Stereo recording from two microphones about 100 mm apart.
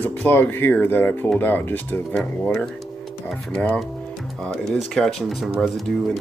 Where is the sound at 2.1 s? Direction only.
10° left (ahead or behind).